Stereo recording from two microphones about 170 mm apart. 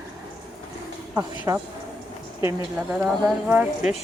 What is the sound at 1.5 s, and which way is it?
Speech, 20° right (ahead or behind).